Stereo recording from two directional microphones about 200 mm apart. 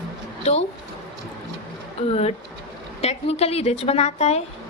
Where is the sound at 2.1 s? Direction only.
30° left (ahead or behind).